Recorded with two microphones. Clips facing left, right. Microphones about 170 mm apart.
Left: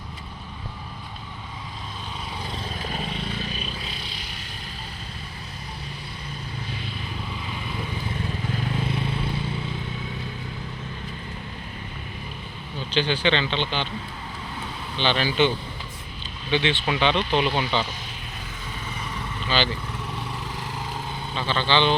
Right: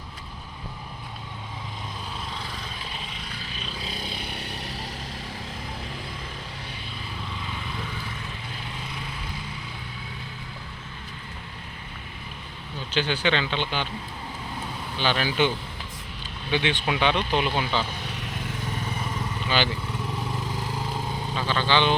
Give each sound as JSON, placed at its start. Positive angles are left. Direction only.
{"t": 3.8, "sound": "vehicle", "side_deg": -40}
{"t": 12.9, "sound": "speech", "side_deg": -10}
{"t": 14.9, "sound": "speech", "side_deg": -5}
{"t": 19.5, "sound": "speech", "side_deg": -15}
{"t": 21.3, "sound": "speech", "side_deg": -10}